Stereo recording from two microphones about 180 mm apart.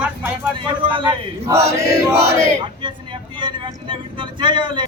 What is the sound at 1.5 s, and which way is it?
Crowd, 15° right (ahead or behind).